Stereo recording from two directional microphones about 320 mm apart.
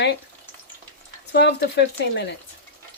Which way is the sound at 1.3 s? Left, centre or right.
Left.